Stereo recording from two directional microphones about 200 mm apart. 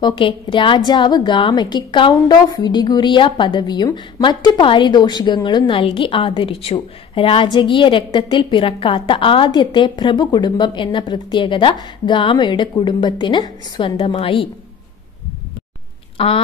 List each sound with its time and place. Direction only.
0.0 s a woman's voice: 25° left (ahead or behind)
16.2 s a woman's voice: 25° left (ahead or behind)